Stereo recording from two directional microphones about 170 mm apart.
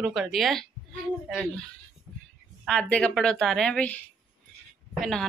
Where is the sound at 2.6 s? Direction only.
5° left (ahead or behind).